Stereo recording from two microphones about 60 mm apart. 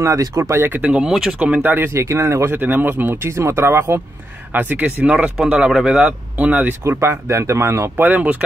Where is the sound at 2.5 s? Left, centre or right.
Right.